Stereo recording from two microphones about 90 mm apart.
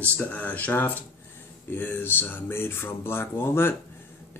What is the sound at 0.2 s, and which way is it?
Speech, 20° left (ahead or behind).